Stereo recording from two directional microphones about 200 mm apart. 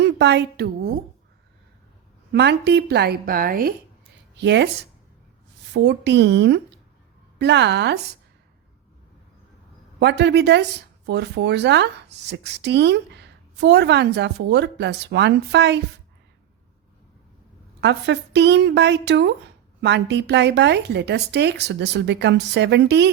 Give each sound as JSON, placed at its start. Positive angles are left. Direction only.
{"t": 0.0, "sound": "a woman's voice", "side_deg": -60}
{"t": 2.3, "sound": "a woman's voice", "side_deg": -55}
{"t": 4.4, "sound": "speech", "side_deg": -60}
{"t": 10.0, "sound": "speech", "side_deg": -60}
{"t": 17.7, "sound": "speech", "side_deg": -60}